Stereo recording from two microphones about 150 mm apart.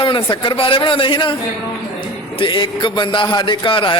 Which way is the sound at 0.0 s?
35° left (ahead or behind).